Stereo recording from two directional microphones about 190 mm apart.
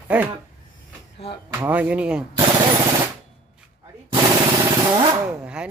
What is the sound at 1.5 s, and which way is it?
Speech, 10° right (ahead or behind).